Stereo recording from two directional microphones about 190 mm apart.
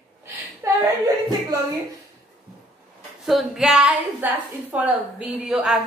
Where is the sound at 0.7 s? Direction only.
20° right (ahead or behind).